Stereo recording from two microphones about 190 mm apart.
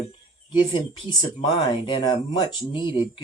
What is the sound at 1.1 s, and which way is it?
Speech, 25° left (ahead or behind).